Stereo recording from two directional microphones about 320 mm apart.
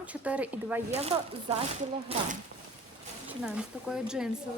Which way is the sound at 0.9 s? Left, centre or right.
Centre.